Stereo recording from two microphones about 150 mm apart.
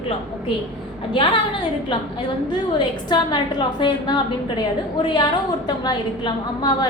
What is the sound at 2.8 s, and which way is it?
A woman's voice, 30° left (ahead or behind).